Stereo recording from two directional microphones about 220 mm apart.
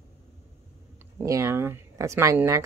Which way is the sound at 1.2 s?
10° right (ahead or behind).